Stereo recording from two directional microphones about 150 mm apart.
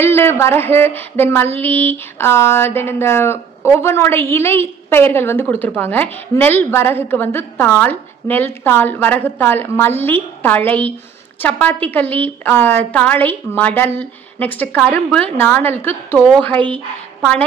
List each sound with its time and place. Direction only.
0.0 s a sound: 15° left (ahead or behind)
16.5 s speech: 35° right (ahead or behind)
17.2 s a woman's voice: 5° left (ahead or behind)